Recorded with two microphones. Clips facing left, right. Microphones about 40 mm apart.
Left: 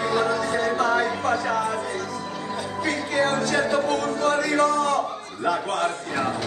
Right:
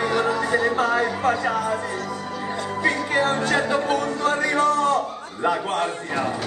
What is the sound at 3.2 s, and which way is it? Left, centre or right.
Speech, right.